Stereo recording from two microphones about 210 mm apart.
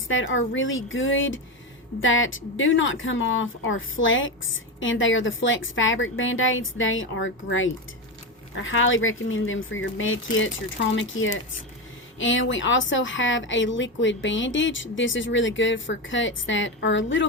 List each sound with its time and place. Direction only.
0.1 s speech: 65° left (ahead or behind)